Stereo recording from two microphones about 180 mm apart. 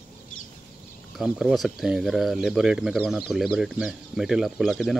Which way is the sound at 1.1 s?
Centre (ahead or behind).